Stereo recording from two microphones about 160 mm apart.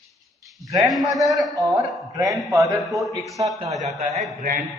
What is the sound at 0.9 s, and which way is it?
A man's voice, centre (ahead or behind).